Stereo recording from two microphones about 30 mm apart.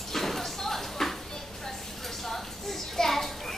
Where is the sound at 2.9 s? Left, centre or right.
Centre.